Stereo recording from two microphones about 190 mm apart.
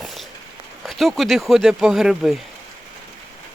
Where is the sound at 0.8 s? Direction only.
Centre (ahead or behind).